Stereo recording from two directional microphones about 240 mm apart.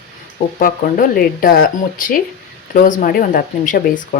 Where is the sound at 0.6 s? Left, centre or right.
Left.